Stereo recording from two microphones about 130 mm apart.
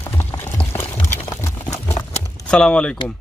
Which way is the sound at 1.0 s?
20° left (ahead or behind).